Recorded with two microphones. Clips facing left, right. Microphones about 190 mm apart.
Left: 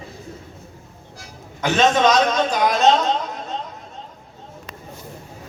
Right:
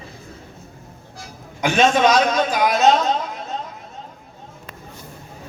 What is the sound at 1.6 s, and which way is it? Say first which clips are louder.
A man's voice: right 1 dB; 10° right (ahead or behind).